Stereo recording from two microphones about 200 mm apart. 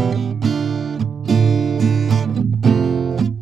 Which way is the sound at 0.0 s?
Centre (ahead or behind).